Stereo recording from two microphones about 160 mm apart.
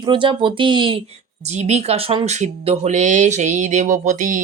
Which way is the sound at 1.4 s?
45° right (ahead or behind).